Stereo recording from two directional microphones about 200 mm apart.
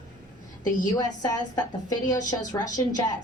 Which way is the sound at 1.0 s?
20° left (ahead or behind).